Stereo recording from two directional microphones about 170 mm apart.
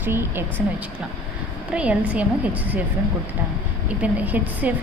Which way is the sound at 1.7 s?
5° right (ahead or behind).